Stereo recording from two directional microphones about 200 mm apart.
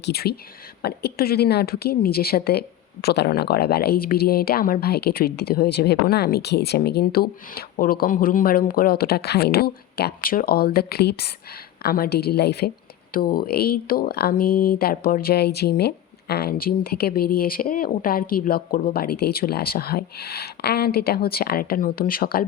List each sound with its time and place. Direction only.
0.0 s a woman's voice: 50° left (ahead or behind)